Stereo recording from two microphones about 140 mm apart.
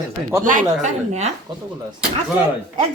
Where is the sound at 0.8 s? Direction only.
55° right (ahead or behind).